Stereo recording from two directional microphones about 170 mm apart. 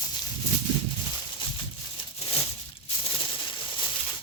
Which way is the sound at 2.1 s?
35° left (ahead or behind).